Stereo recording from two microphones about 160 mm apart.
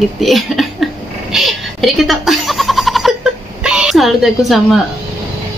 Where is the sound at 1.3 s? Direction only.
Centre (ahead or behind).